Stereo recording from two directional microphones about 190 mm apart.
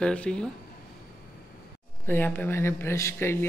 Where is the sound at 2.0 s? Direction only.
10° left (ahead or behind).